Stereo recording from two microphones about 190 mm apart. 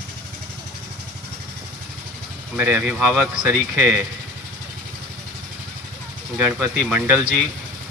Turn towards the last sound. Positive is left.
turn(degrees=-10)  # may be behind; listen again after turning